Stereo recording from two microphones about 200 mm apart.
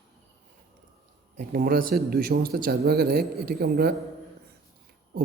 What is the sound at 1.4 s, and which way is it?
Speech, 45° right (ahead or behind).